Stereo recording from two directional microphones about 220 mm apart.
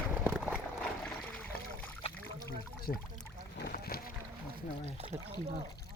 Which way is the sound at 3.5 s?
45° left (ahead or behind).